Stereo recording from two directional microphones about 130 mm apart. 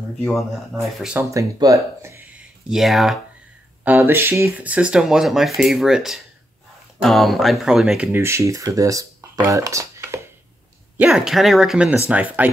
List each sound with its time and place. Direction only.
0.2 s speech: centre (ahead or behind)
1.3 s speech: 25° right (ahead or behind); by 3.2 s centre (ahead or behind)
3.8 s speech: 15° right (ahead or behind)
11.0 s speech: 5° right (ahead or behind)